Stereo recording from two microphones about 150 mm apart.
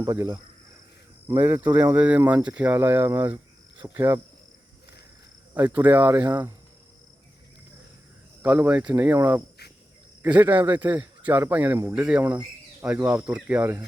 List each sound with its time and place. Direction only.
0.0 s speech: 20° right (ahead or behind)
5.5 s speech: 10° right (ahead or behind)
8.4 s speech: 10° right (ahead or behind)